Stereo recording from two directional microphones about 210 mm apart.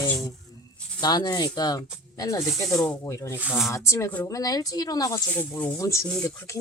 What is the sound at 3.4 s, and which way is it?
Speech, 5° right (ahead or behind).